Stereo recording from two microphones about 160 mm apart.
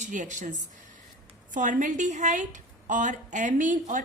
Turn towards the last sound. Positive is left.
turn(degrees=-50)  # may be behind; listen again after turning